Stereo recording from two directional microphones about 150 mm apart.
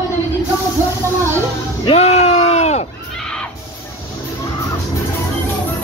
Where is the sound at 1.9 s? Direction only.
45° left (ahead or behind).